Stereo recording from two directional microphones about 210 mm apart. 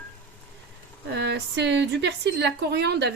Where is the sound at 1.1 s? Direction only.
55° right (ahead or behind).